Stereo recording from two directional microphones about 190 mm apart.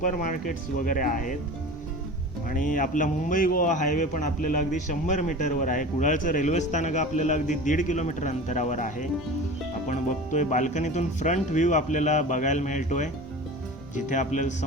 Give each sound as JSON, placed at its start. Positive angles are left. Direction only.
{"t": 0.0, "sound": "speech", "side_deg": 45}
{"t": 2.5, "sound": "a man's voice", "side_deg": 45}